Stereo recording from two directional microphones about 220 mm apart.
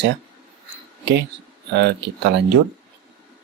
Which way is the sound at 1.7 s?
50° right (ahead or behind).